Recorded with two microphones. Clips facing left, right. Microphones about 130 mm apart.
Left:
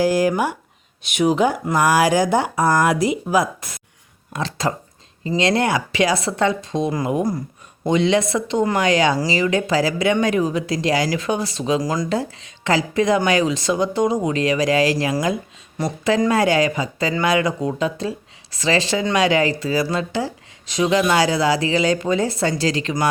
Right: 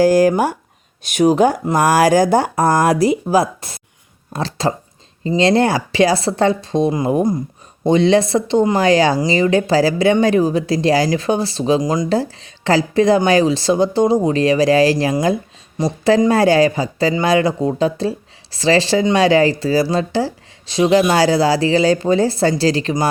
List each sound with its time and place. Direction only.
0.0 s a woman's voice: 40° right (ahead or behind); by 7.2 s 25° right (ahead or behind)
7.9 s a woman's voice: 35° right (ahead or behind)
11.8 s speech: 20° right (ahead or behind)
12.0 s a woman's voice: 35° right (ahead or behind)
15.8 s speech: 20° right (ahead or behind)
16.3 s a woman's voice: 35° right (ahead or behind)